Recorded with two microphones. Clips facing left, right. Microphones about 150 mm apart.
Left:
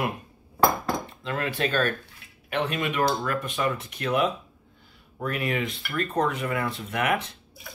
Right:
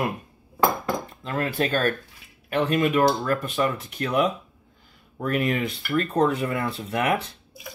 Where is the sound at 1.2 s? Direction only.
40° right (ahead or behind).